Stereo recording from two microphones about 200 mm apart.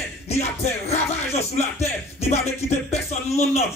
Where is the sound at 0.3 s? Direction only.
30° left (ahead or behind).